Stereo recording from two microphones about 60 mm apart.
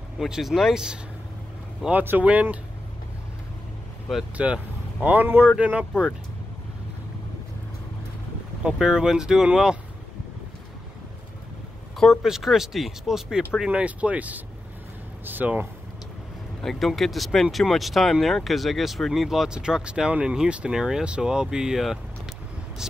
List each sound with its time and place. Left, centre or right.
0.3 s speech: centre
1.9 s speech: right
4.1 s speech: centre
5.0 s speech: right
8.7 s speech: centre
12.2 s speech: centre
13.7 s speech: centre
16.6 s speech: centre